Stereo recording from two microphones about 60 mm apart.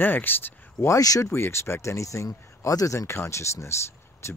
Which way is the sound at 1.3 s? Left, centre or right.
Left.